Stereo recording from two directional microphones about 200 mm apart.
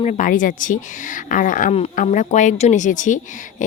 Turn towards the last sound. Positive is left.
turn(degrees=40)  # may be behind; listen again after turning